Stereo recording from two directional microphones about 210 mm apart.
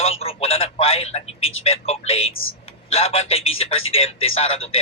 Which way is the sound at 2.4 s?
70° left (ahead or behind).